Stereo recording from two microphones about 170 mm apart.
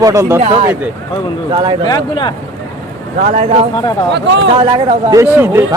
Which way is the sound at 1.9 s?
25° left (ahead or behind).